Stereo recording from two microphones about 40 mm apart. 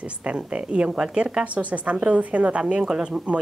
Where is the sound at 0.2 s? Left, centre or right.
Right.